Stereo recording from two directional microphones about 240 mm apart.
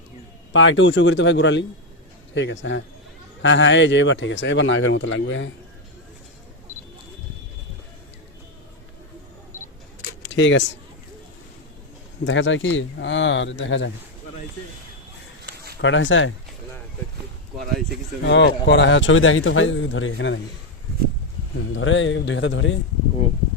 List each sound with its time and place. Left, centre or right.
0.5 s speech: left
10.3 s speech: left
12.2 s speech: left
15.8 s speech: left
18.2 s speech: left
21.8 s speech: left